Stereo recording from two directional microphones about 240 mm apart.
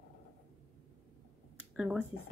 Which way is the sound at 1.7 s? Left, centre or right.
Centre.